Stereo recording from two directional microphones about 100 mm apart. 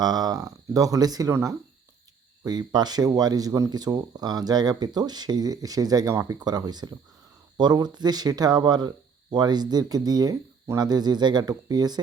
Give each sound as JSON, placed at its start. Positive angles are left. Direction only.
{"t": 0.0, "sound": "speech", "side_deg": -40}
{"t": 2.4, "sound": "speech", "side_deg": -45}